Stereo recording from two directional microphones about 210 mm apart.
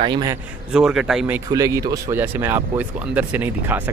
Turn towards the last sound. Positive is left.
turn(degrees=-10)  # may be behind; listen again after turning